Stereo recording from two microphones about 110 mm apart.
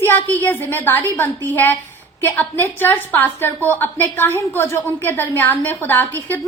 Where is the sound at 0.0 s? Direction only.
20° left (ahead or behind).